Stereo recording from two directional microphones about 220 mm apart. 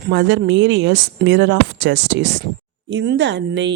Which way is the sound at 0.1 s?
55° right (ahead or behind).